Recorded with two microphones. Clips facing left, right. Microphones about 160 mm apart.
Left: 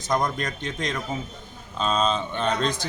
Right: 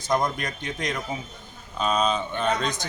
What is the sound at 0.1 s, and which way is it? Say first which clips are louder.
Speech: even; 15° right (ahead or behind).